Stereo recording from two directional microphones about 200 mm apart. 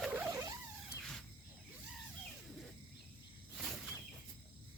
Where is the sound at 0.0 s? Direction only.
10° right (ahead or behind).